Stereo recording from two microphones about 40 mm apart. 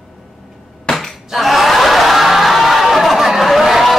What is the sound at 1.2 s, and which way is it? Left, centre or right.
Snicker, centre.